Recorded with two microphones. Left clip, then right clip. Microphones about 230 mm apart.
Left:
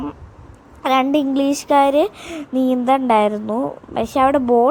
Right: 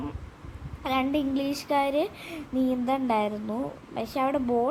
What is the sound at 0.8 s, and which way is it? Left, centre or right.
A woman's voice, left.